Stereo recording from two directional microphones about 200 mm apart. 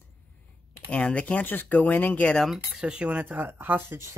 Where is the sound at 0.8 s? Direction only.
5° left (ahead or behind).